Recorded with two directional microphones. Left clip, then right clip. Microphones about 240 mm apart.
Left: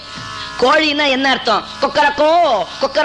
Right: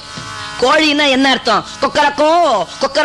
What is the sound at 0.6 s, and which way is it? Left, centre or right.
A man's voice, left.